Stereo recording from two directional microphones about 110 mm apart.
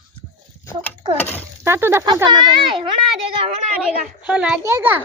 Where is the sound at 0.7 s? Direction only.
20° left (ahead or behind).